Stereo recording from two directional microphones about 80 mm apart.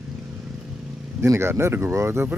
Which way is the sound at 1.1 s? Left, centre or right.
Right.